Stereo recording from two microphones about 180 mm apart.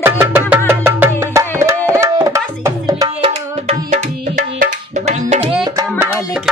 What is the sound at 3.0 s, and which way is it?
Music, 30° right (ahead or behind).